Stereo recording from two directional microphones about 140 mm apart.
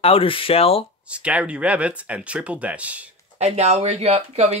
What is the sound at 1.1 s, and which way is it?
Speech, 10° right (ahead or behind).